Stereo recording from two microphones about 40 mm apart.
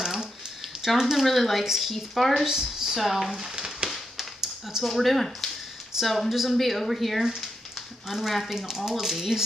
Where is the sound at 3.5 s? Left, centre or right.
Centre.